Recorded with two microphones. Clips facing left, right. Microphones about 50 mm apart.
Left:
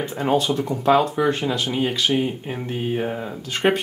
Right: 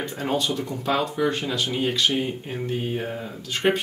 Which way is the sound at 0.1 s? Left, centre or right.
Centre.